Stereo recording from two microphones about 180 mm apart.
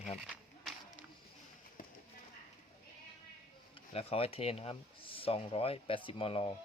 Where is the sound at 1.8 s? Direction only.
50° left (ahead or behind).